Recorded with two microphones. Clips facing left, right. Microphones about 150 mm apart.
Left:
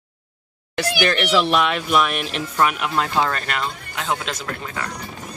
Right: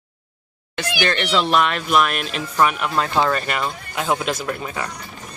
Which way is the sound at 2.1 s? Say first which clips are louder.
Right 1 dB; centre (ahead or behind).